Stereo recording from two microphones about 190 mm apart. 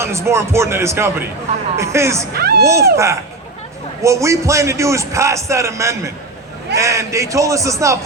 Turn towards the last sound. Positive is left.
turn(degrees=-15)  # may be behind; listen again after turning